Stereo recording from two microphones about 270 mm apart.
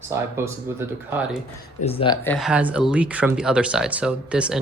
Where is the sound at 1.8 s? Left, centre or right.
Centre.